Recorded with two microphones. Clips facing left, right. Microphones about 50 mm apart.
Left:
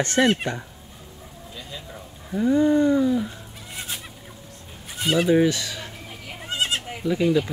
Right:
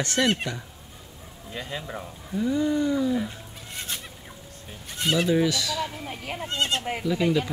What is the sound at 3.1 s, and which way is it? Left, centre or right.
Goat, centre.